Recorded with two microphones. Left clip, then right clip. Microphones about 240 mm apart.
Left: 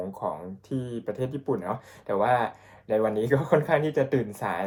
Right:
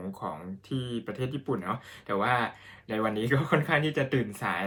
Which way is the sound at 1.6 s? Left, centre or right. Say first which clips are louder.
Left 2 dB; right.